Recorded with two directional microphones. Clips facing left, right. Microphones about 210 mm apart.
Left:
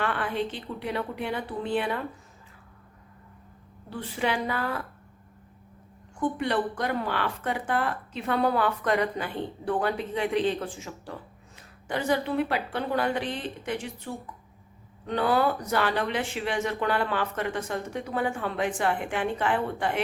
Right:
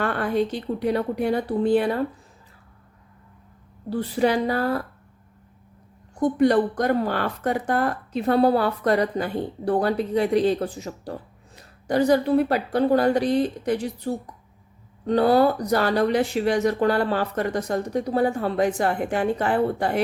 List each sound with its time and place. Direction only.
0.0 s a woman's voice: 40° right (ahead or behind)
3.8 s a woman's voice: 35° right (ahead or behind)
6.1 s a woman's voice: 40° right (ahead or behind)